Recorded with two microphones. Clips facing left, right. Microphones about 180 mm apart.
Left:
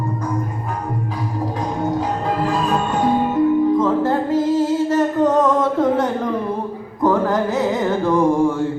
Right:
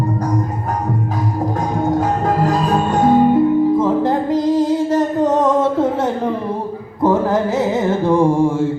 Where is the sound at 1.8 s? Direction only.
45° right (ahead or behind).